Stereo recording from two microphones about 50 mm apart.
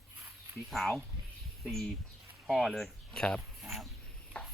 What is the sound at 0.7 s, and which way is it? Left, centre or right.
Speech, centre.